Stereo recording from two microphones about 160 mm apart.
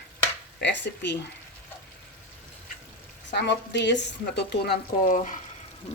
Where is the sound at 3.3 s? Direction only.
90° left.